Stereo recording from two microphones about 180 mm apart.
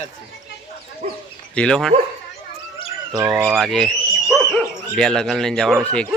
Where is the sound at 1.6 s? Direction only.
5° left (ahead or behind).